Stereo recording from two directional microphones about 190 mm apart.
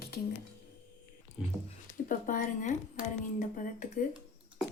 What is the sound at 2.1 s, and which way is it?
A woman's voice, 45° left (ahead or behind).